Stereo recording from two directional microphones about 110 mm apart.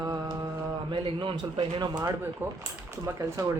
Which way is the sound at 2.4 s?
20° right (ahead or behind).